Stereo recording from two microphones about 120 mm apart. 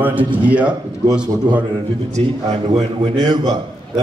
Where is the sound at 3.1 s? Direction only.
35° right (ahead or behind).